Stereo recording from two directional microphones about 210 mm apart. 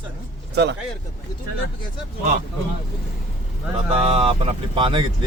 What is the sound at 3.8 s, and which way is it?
Speech, 30° right (ahead or behind).